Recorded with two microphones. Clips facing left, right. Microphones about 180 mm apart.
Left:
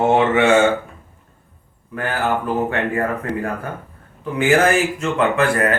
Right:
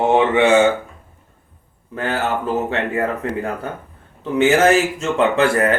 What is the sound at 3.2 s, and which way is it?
Speech, 25° right (ahead or behind).